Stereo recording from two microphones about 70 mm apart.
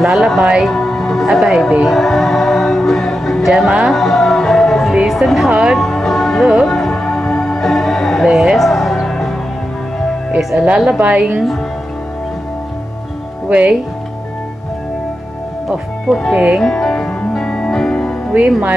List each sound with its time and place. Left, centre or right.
0.0 s speech: centre
0.7 s speech: centre
3.9 s music: centre
5.0 s a woman's voice: centre
5.8 s music: centre
11.0 s a woman's voice: right
13.5 s speech: centre
16.1 s a woman's voice: centre
16.3 s speech: centre
16.6 s music: centre